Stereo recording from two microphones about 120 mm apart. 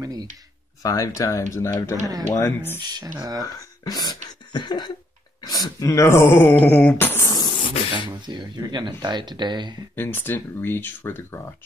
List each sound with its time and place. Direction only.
0.0 s a sound: 30° right (ahead or behind)
0.8 s speech: 30° left (ahead or behind)
3.2 s speech: 30° right (ahead or behind)
3.4 s speech: 30° left (ahead or behind)
4.5 s cough: 40° left (ahead or behind)
5.4 s speech: 30° left (ahead or behind)
6.6 s a sound: 10° left (ahead or behind)
7.4 s beatboxing: 40° left (ahead or behind)
8.3 s speech: 35° right (ahead or behind)
9.9 s speech: 15° left (ahead or behind)